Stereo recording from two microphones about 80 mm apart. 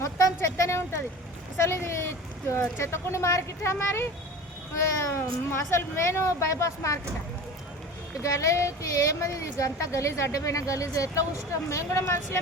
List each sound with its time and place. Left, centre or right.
0.3 s a sound: left
1.6 s speech: left
8.2 s speech: left